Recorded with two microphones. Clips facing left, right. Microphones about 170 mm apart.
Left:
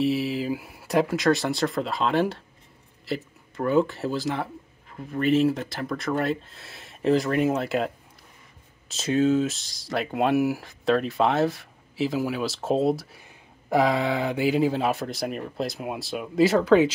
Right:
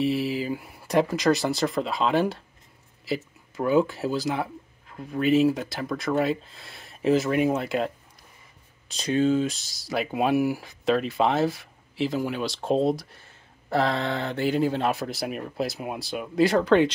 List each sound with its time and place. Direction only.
0.0 s speech: centre (ahead or behind)